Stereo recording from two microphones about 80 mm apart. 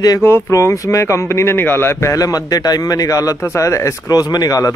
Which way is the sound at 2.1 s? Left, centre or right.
Left.